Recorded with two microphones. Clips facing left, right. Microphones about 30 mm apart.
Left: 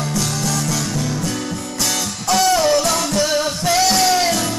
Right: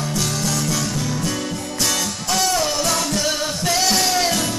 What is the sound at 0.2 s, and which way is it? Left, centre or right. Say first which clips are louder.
Music: right 1 dB; centre.